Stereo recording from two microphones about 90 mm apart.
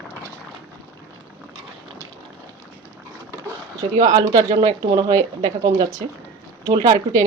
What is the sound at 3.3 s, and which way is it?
Speech, 40° right (ahead or behind).